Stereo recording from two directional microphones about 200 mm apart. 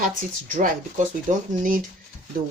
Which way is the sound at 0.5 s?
40° right (ahead or behind).